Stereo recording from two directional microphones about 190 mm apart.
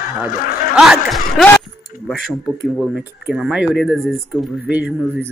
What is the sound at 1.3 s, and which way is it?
Vehicle, 10° left (ahead or behind).